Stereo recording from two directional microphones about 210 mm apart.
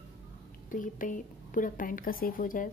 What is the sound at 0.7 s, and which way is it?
A woman's voice, 40° left (ahead or behind).